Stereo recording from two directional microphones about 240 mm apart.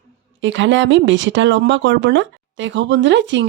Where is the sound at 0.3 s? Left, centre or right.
Right.